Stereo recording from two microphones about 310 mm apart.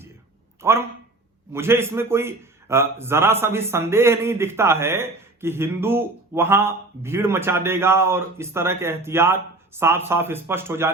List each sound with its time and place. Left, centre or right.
0.6 s a man's voice: centre